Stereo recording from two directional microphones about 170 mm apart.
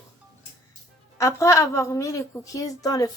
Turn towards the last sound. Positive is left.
turn(degrees=20)  # may be behind; listen again after turning